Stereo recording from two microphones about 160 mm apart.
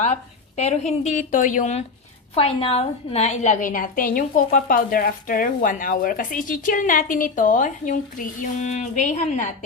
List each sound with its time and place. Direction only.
0.0 s a woman's voice: 45° left (ahead or behind)
2.3 s a woman's voice: 35° left (ahead or behind)